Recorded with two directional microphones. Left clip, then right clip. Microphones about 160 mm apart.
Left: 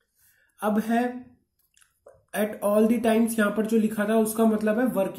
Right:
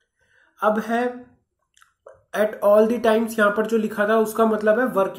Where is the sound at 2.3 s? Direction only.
15° left (ahead or behind).